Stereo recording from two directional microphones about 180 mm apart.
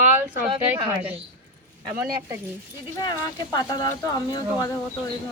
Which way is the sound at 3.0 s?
25° left (ahead or behind).